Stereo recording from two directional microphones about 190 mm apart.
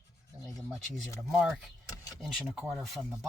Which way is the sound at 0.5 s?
Centre (ahead or behind).